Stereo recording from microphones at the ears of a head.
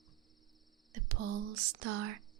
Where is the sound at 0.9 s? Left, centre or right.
Right.